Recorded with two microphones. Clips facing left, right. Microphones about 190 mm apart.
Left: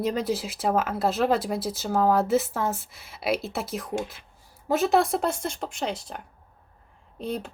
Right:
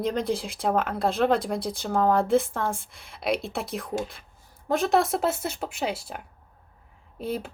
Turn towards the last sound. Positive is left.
turn(degrees=-5)  # may be behind; listen again after turning